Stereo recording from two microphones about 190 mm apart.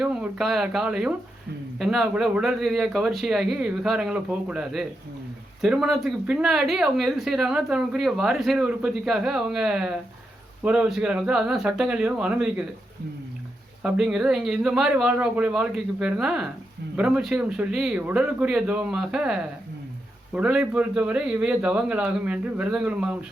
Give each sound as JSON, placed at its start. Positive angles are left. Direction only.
{"t": 0.0, "sound": "speech", "side_deg": -5}
{"t": 13.8, "sound": "speech", "side_deg": -5}